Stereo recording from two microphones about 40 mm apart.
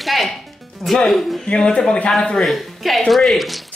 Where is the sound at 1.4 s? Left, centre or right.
Left.